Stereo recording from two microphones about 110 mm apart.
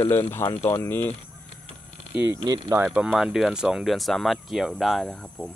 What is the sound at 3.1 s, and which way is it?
Speech, 5° right (ahead or behind).